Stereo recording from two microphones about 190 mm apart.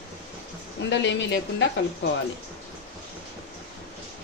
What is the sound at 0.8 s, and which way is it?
Speech, 70° left (ahead or behind).